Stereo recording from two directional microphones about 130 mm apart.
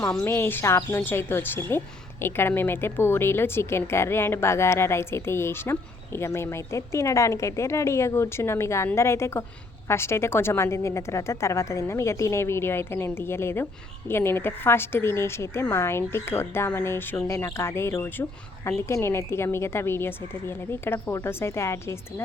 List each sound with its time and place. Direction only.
0.3 s a woman's voice: 15° left (ahead or behind)